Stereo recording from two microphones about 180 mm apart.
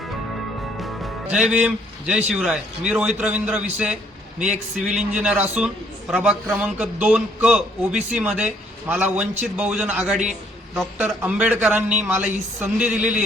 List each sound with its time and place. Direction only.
0.8 s a man's voice: centre (ahead or behind)